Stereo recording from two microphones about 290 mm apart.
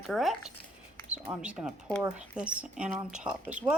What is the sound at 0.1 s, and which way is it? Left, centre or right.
Speech, centre.